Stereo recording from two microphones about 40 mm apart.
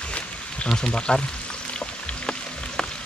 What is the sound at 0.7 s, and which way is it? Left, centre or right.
Speech, centre.